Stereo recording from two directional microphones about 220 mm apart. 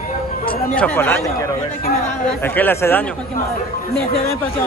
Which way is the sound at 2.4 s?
10° left (ahead or behind).